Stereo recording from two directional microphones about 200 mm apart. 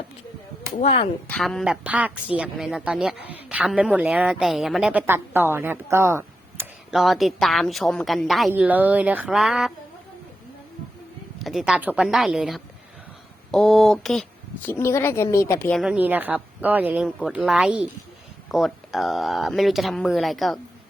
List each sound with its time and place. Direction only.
0.7 s speech: 35° left (ahead or behind)
1.3 s a woman's voice: centre (ahead or behind)
6.9 s a woman's voice: centre (ahead or behind)
11.3 s a woman's voice: centre (ahead or behind)
15.8 s a woman's voice: 5° right (ahead or behind)